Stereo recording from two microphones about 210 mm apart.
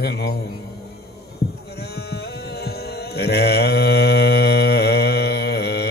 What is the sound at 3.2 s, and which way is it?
Mantra, 50° left (ahead or behind).